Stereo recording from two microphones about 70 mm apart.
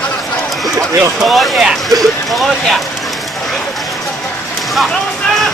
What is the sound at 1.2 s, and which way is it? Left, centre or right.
Speech, centre.